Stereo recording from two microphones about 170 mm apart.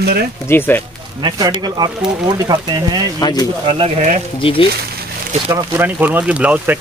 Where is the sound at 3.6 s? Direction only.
35° right (ahead or behind).